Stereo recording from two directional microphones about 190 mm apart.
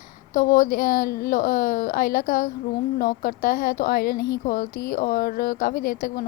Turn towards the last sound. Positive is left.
turn(degrees=50)  # may be behind; listen again after turning